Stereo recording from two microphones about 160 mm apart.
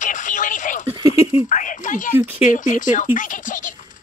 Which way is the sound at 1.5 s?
55° left (ahead or behind).